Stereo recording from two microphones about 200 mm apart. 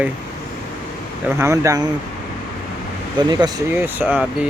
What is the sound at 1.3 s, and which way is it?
Speech, 15° right (ahead or behind).